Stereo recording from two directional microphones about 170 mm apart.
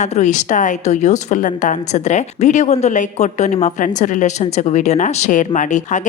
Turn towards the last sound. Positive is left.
turn(degrees=45)  # may be behind; listen again after turning